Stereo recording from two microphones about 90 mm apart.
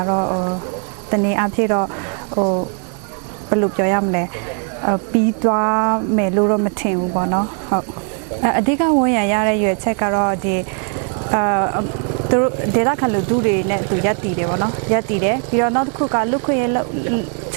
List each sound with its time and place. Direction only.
0.0 s speech: 25° right (ahead or behind)